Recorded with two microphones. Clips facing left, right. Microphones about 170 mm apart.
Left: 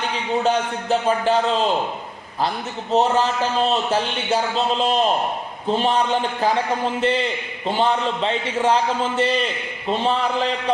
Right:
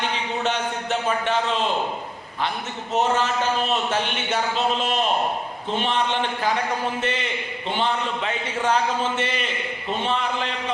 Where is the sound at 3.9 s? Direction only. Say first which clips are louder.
Left 3 dB; 35° left (ahead or behind).